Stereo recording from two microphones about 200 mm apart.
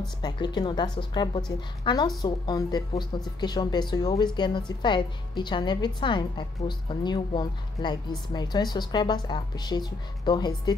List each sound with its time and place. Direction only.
0.2 s a woman's voice: 20° left (ahead or behind)